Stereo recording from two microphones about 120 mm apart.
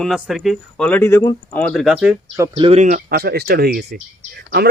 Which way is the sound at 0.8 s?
15° left (ahead or behind).